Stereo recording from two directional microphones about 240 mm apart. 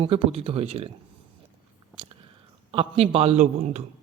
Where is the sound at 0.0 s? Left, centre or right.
Right.